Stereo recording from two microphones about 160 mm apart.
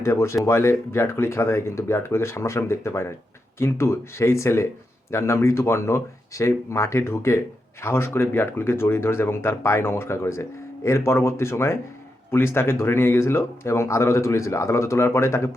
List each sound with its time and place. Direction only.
0.0 s speech: 15° left (ahead or behind)